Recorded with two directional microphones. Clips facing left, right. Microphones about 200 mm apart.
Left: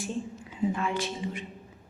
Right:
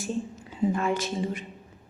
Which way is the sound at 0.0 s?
40° right (ahead or behind).